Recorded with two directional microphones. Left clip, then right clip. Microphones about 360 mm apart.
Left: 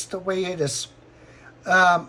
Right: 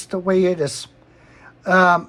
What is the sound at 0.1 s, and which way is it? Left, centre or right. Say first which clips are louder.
Speech: right 8 dB; centre.